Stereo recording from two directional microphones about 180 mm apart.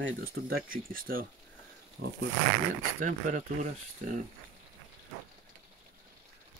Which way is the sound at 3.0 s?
45° right (ahead or behind).